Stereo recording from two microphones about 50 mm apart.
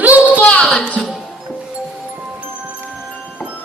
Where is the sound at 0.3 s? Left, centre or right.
Left.